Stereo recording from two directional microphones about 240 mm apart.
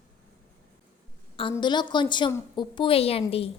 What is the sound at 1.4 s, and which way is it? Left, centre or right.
A woman's voice, centre.